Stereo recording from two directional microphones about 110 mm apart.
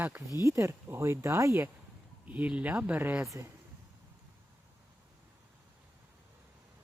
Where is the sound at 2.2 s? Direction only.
15° right (ahead or behind).